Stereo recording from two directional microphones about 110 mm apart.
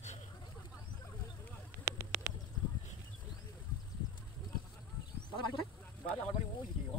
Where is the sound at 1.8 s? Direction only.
25° right (ahead or behind).